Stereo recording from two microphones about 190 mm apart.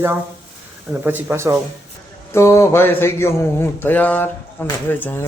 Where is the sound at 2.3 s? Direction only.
15° left (ahead or behind).